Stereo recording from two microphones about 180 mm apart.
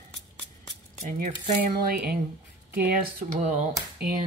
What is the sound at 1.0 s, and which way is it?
Speech, 45° right (ahead or behind).